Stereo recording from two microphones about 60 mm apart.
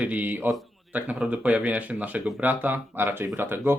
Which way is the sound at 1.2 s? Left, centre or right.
Centre.